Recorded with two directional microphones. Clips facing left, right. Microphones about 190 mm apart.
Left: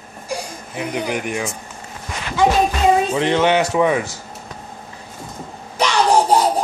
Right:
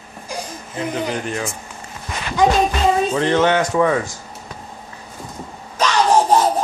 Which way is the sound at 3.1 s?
15° left (ahead or behind).